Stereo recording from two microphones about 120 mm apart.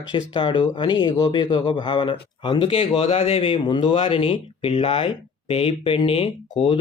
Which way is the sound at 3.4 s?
40° left (ahead or behind).